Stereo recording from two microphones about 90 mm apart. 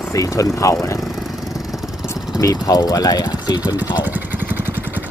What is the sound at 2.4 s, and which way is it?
Speech, 45° left (ahead or behind).